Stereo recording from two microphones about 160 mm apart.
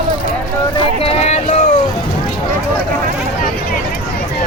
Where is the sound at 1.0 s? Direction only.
40° left (ahead or behind).